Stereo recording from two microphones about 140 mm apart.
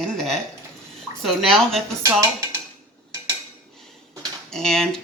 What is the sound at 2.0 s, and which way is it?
Speech, 20° right (ahead or behind).